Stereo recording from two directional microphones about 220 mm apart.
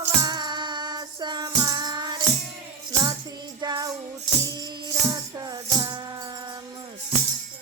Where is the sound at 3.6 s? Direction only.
20° right (ahead or behind).